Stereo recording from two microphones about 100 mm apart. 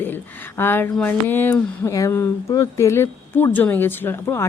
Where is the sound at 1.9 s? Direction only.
30° left (ahead or behind).